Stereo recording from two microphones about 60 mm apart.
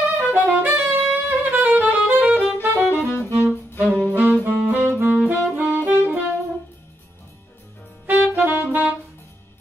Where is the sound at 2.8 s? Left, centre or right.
Left.